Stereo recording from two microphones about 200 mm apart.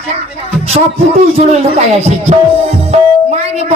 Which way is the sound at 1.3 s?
30° right (ahead or behind).